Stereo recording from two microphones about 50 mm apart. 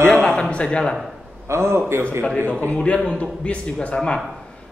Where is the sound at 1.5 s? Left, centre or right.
Right.